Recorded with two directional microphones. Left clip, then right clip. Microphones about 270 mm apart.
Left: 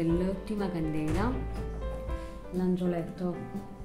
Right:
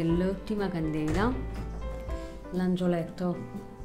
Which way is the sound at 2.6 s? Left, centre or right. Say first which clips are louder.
Right 2 dB; right.